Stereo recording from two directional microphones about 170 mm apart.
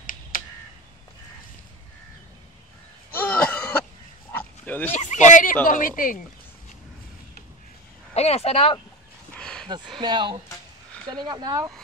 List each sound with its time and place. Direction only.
0.3 s a sound: 55° left (ahead or behind)
3.2 s cough: 10° left (ahead or behind)
4.3 s pig: 10° left (ahead or behind)
4.9 s speech: 45° left (ahead or behind)
8.1 s speech: 40° left (ahead or behind)
9.4 s a sound: 5° left (ahead or behind)
9.9 s speech: 25° right (ahead or behind)